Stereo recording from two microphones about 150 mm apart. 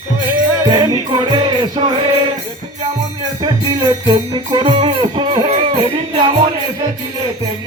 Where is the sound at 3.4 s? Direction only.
25° right (ahead or behind).